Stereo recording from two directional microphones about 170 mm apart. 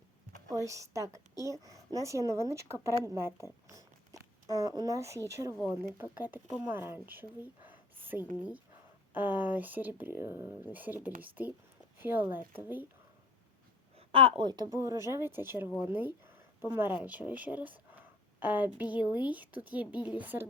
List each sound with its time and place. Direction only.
0.5 s speech: 20° right (ahead or behind)
3.7 s a sound: 20° right (ahead or behind)
5.3 s speech: 20° right (ahead or behind)
14.1 s speech: 30° right (ahead or behind); by 20.5 s 10° right (ahead or behind)